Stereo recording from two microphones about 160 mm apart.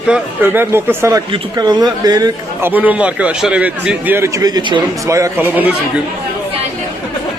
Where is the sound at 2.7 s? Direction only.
10° right (ahead or behind).